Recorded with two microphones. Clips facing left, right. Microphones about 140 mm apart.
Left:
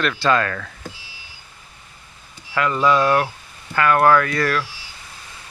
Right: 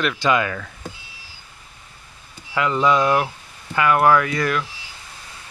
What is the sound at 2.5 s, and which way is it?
Speech, 20° right (ahead or behind).